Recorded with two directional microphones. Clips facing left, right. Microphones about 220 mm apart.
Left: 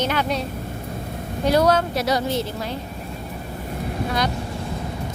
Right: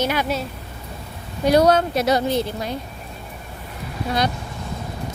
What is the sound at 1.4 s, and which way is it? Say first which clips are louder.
A woman's voice: right 3 dB; 20° right (ahead or behind).